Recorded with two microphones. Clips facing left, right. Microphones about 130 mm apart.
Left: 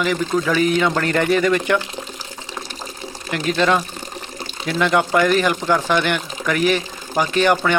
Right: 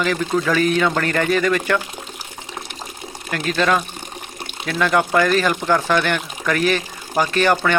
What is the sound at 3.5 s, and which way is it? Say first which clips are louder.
Speech: left 1 dB; 25° left (ahead or behind).